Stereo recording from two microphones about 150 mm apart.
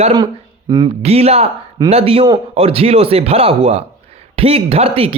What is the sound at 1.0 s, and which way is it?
A man's voice, 45° right (ahead or behind).